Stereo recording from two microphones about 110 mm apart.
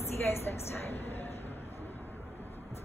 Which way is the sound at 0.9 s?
70° left (ahead or behind).